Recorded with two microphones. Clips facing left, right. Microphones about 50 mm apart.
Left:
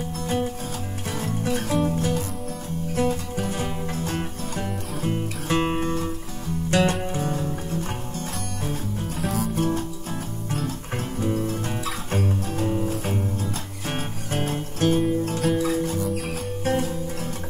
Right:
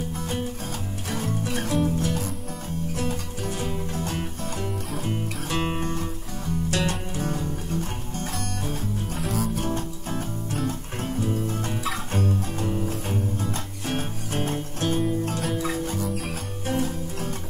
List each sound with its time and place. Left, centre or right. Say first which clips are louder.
1.7 s music: even; centre
7.2 s music: left 2 dB; centre
9.2 s music: left 3 dB; centre
11.1 s music: left 2 dB; centre
15.2 s music: left 4 dB; centre